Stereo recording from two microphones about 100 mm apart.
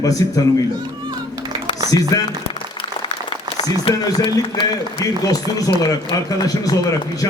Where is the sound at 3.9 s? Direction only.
60° left (ahead or behind).